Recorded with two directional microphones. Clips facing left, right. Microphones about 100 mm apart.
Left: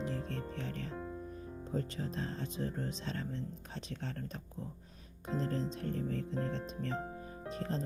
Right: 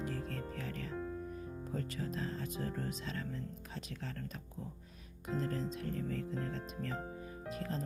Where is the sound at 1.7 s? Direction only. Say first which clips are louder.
Left 3 dB; 30° left (ahead or behind).